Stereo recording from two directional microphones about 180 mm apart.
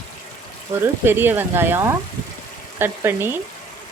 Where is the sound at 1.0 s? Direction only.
10° right (ahead or behind).